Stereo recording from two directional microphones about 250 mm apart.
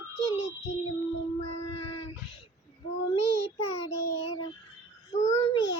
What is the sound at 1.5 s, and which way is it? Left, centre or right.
Child singing, left.